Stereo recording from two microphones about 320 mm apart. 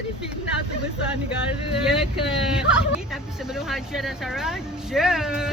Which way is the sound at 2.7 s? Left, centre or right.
Centre.